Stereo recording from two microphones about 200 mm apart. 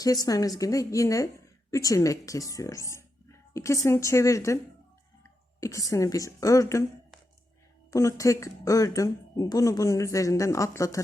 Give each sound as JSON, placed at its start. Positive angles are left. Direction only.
{"t": 0.0, "sound": "a woman's voice", "side_deg": 20}
{"t": 7.9, "sound": "a woman's voice", "side_deg": 15}